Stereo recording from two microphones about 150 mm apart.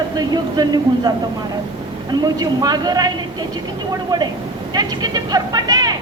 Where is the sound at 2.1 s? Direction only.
25° right (ahead or behind).